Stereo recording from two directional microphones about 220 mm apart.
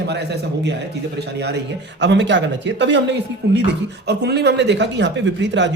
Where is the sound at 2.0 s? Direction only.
55° right (ahead or behind).